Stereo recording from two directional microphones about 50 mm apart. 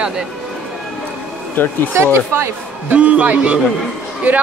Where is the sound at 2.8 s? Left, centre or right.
Right.